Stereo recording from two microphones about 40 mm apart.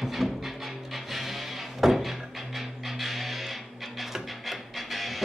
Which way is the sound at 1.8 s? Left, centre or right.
Centre.